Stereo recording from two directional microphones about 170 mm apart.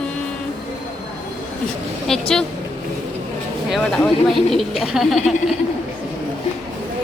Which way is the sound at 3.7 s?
5° left (ahead or behind).